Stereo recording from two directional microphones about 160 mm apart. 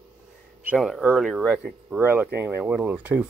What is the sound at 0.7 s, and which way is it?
Speech, centre (ahead or behind).